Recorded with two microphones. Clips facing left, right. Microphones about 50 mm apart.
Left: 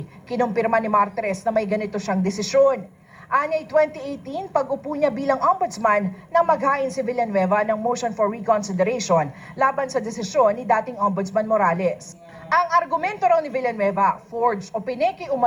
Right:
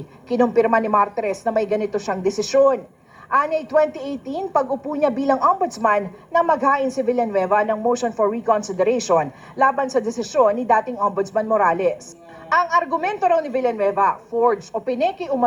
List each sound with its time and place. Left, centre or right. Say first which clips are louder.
0.3 s speech: right 4 dB; right